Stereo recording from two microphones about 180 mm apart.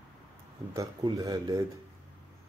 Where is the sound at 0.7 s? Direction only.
20° right (ahead or behind).